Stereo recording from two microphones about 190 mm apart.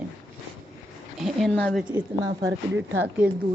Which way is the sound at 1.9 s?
20° right (ahead or behind).